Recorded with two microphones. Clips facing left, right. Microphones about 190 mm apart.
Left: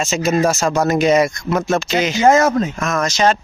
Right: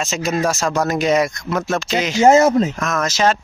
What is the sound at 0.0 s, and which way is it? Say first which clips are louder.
Speech: left 3 dB; centre (ahead or behind).